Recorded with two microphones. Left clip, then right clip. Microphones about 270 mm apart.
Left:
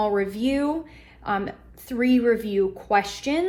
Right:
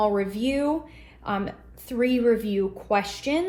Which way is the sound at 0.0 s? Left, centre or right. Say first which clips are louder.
Even; left.